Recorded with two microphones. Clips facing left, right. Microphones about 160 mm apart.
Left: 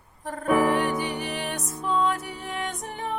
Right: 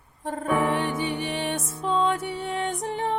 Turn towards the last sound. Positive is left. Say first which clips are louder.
# right 5 dB
turn(degrees=-30)  # may be behind; listen again after turning